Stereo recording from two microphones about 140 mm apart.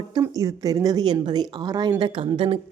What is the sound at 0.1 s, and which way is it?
A woman's voice, 25° right (ahead or behind).